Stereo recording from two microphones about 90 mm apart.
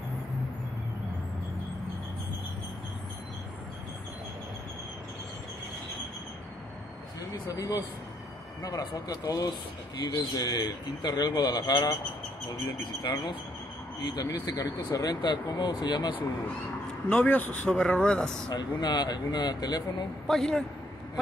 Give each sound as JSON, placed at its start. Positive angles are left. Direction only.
{"t": 7.4, "sound": "a man's voice", "side_deg": 40}
{"t": 13.0, "sound": "speech", "side_deg": 60}
{"t": 14.0, "sound": "a man's voice", "side_deg": 50}
{"t": 17.1, "sound": "speech", "side_deg": 20}
{"t": 18.8, "sound": "a man's voice", "side_deg": 50}
{"t": 20.2, "sound": "speech", "side_deg": 5}